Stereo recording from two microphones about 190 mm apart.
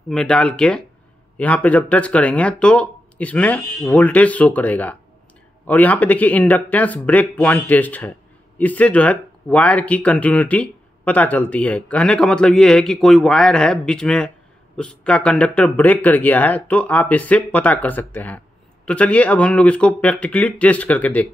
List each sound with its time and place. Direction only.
0.1 s speech: 5° left (ahead or behind)